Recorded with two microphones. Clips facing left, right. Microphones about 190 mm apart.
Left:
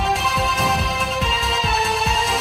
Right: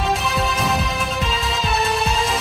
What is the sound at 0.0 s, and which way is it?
Music, centre (ahead or behind).